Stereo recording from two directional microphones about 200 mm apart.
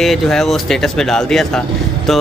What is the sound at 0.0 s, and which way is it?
Speech, centre (ahead or behind).